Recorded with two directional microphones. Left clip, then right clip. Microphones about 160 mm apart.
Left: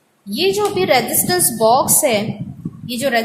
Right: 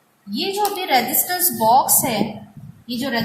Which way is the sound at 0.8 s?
65° left (ahead or behind).